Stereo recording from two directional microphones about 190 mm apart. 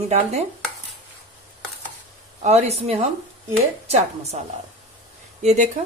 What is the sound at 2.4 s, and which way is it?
A woman's voice, 35° right (ahead or behind).